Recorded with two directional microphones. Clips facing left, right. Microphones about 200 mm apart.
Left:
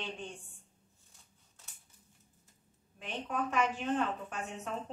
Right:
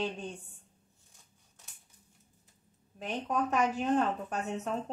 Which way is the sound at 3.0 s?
40° right (ahead or behind).